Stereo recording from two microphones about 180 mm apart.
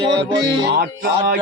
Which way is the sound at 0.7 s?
55° right (ahead or behind).